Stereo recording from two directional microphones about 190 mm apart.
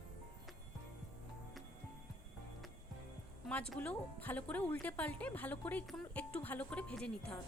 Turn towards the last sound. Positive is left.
turn(degrees=5)  # may be behind; listen again after turning